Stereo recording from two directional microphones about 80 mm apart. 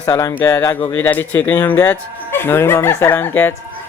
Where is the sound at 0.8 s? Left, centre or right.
Left.